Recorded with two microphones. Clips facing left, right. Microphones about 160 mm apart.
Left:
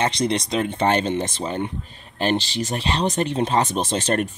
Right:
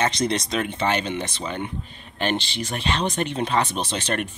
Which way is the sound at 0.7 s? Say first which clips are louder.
Left 6 dB; 45° left (ahead or behind).